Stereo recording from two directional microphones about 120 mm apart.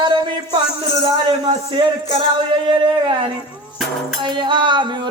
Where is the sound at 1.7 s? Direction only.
45° right (ahead or behind).